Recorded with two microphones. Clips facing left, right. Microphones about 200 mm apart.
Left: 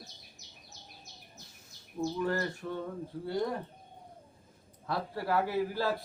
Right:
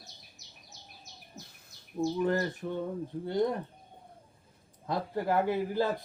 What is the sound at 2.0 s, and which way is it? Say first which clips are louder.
A man's voice: right 3 dB; 20° right (ahead or behind).